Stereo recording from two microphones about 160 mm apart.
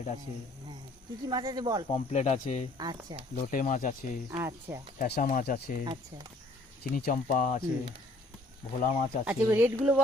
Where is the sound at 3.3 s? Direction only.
55° left (ahead or behind).